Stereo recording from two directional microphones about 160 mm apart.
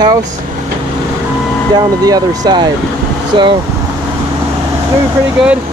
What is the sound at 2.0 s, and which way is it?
Speech, 25° right (ahead or behind).